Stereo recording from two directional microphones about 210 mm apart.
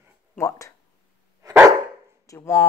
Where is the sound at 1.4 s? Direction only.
15° right (ahead or behind).